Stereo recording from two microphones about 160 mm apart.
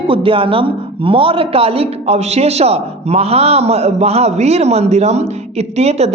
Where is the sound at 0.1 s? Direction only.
35° right (ahead or behind).